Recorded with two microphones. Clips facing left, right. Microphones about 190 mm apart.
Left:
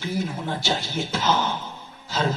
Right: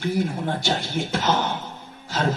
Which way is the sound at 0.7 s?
55° right (ahead or behind).